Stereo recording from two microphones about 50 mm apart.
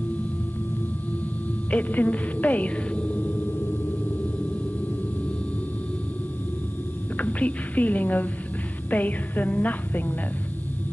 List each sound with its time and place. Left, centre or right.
1.7 s speech: left
7.2 s a woman's voice: left